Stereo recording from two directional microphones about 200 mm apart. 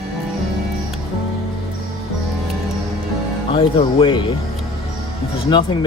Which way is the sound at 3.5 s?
25° left (ahead or behind).